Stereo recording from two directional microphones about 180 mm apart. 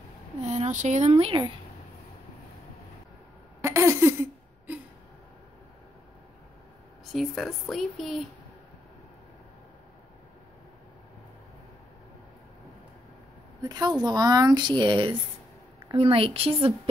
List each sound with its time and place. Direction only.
0.4 s speech: 40° right (ahead or behind)
3.6 s a sound: 15° right (ahead or behind)
7.1 s speech: centre (ahead or behind)
13.6 s speech: 20° right (ahead or behind)